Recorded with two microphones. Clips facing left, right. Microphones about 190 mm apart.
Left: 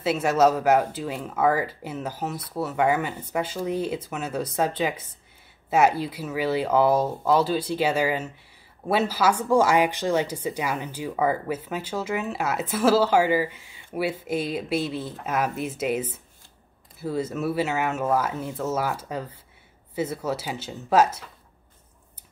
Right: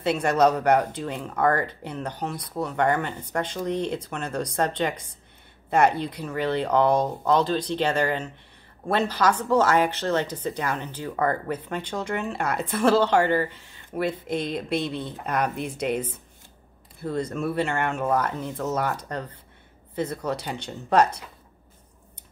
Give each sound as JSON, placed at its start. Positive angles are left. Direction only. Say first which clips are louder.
{"t": 0.0, "sound": "speech", "louder": "even", "side_deg": 5}